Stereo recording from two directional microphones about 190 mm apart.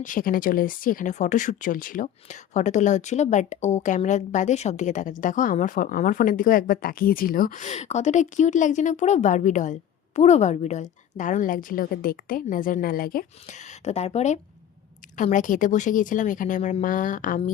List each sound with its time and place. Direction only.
0.0 s speech: 45° left (ahead or behind)